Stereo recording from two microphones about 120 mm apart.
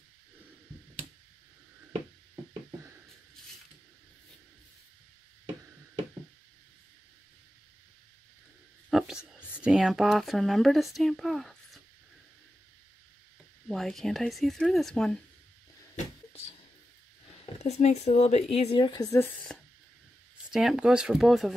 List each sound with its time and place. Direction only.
8.9 s whispering: 5° right (ahead or behind)
9.6 s speech: 5° right (ahead or behind)
13.7 s speech: centre (ahead or behind)
17.6 s speech: 65° left (ahead or behind)
18.8 s a woman's voice: 35° left (ahead or behind)
19.1 s a woman's voice: 15° left (ahead or behind)
20.5 s speech: 5° right (ahead or behind)